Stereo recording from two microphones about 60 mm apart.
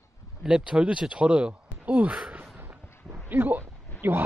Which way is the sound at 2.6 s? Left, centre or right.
Right.